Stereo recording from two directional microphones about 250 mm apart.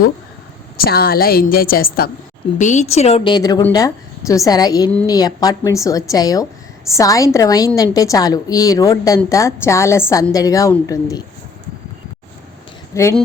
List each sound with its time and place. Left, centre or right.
0.8 s a woman's voice: left; by 11.2 s centre
12.9 s speech: centre